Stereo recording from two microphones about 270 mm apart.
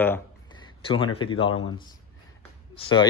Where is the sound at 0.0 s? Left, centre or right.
Centre.